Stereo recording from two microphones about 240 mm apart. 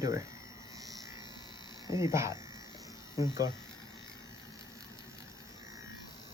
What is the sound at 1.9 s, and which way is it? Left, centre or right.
Speech, centre.